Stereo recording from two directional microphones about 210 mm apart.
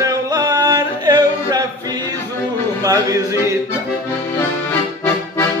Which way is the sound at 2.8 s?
15° right (ahead or behind).